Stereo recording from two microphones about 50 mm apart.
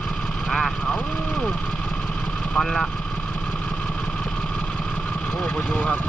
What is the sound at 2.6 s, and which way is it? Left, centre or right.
Speech, centre.